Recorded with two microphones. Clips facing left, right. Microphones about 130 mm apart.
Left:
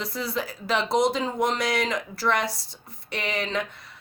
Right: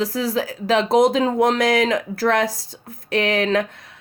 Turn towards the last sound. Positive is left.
turn(degrees=-50)  # may be behind; listen again after turning